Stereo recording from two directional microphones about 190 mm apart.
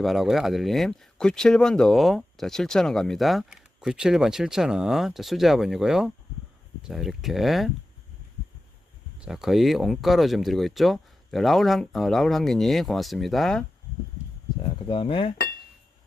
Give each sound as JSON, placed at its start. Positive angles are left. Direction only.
{"t": 0.0, "sound": "speech", "side_deg": 0}
{"t": 9.1, "sound": "speech", "side_deg": -5}
{"t": 14.6, "sound": "speech", "side_deg": 30}